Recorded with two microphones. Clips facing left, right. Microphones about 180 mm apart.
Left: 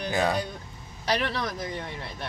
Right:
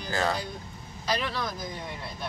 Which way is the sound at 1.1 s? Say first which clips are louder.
Left 3 dB; 70° left (ahead or behind).